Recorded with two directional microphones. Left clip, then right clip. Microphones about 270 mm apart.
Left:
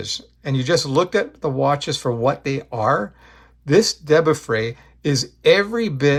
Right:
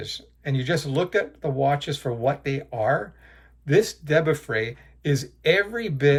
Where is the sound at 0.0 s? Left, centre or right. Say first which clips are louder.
Left 5 dB; left.